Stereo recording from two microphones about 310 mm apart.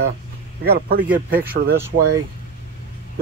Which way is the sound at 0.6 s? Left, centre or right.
Right.